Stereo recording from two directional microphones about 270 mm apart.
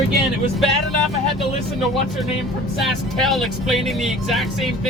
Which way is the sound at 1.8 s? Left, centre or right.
Centre.